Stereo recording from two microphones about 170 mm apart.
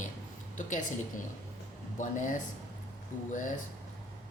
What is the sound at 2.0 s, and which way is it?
Speech, 50° left (ahead or behind).